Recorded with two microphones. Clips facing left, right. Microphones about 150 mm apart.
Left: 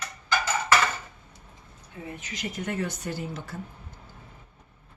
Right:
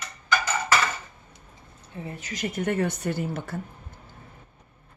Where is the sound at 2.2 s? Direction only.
45° right (ahead or behind).